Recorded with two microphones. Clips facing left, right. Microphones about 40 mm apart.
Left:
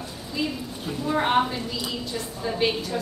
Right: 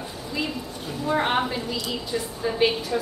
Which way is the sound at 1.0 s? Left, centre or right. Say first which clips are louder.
Left 1 dB; centre.